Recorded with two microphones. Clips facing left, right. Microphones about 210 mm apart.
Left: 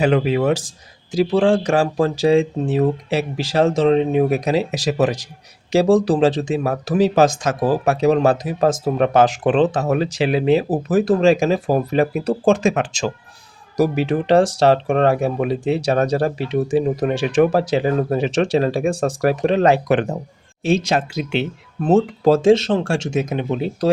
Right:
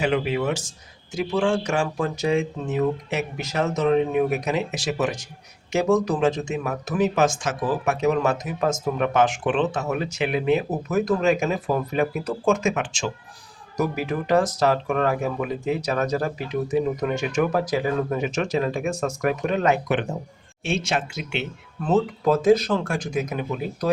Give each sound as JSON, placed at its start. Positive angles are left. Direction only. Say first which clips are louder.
{"t": 0.4, "sound": "speech", "louder": "left 7 dB", "side_deg": 35}
{"t": 14.4, "sound": "speech", "louder": "left 5 dB", "side_deg": 75}
{"t": 14.7, "sound": "speech", "louder": "left 6 dB", "side_deg": 30}
{"t": 15.4, "sound": "speech", "louder": "left 6 dB", "side_deg": 80}
{"t": 15.9, "sound": "speech", "louder": "left 7 dB", "side_deg": 30}
{"t": 18.2, "sound": "speech", "louder": "left 6 dB", "side_deg": 90}
{"t": 18.5, "sound": "speech", "louder": "left 6 dB", "side_deg": 30}